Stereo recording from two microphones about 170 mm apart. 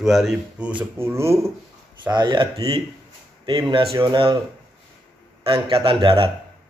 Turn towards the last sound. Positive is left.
turn(degrees=-30)  # may be behind; listen again after turning